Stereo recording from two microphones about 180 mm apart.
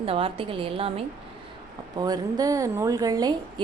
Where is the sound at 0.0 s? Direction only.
30° right (ahead or behind).